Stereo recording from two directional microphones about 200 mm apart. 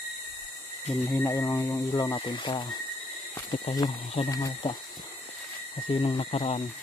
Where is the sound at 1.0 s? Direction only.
15° left (ahead or behind).